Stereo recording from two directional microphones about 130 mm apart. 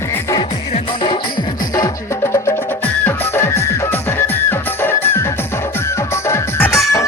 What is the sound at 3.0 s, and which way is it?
Music, 20° left (ahead or behind).